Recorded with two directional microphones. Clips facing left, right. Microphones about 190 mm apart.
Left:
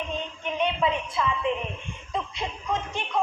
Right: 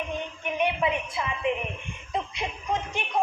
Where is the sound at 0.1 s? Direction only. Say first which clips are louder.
Even; 15° right (ahead or behind).